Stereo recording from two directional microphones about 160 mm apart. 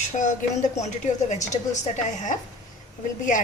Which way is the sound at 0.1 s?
50° left (ahead or behind).